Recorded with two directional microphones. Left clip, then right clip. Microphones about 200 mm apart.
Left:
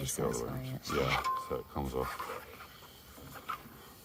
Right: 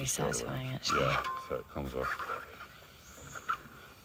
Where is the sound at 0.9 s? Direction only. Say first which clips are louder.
Even; 25° left (ahead or behind).